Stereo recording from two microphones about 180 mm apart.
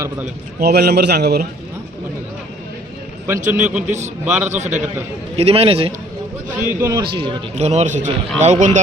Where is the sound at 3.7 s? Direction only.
5° right (ahead or behind).